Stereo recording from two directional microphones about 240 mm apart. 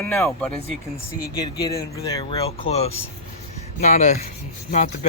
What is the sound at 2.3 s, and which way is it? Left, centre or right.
Speech, left.